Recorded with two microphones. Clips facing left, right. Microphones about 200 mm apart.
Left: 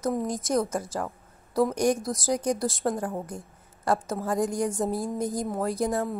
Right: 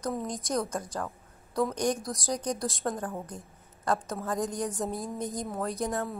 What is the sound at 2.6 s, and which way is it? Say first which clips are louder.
A woman's voice: left 5 dB; 5° left (ahead or behind).